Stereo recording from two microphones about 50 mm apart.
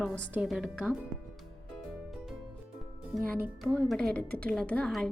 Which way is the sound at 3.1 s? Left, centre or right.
Centre.